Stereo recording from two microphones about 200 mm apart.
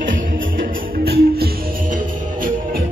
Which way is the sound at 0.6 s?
50° right (ahead or behind).